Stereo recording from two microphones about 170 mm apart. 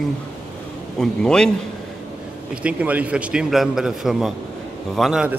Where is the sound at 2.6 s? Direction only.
5° right (ahead or behind).